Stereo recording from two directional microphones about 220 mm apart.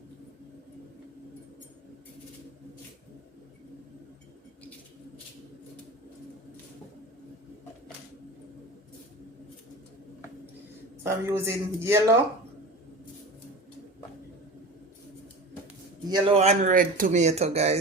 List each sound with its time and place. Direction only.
11.0 s a man's voice: 10° right (ahead or behind)
16.0 s speech: 30° right (ahead or behind)